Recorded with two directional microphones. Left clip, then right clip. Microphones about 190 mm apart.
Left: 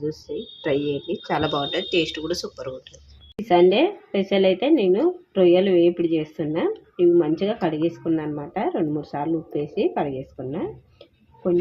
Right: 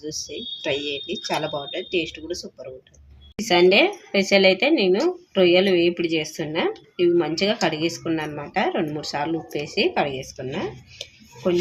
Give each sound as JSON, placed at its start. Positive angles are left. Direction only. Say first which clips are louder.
{"t": 0.6, "sound": "a woman's voice", "louder": "left 2 dB", "side_deg": 15}